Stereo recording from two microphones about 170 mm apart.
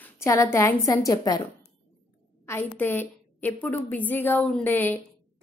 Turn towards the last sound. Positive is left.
turn(degrees=10)  # may be behind; listen again after turning